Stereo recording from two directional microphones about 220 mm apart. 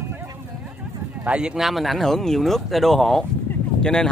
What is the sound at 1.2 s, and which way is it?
Speech, 5° right (ahead or behind).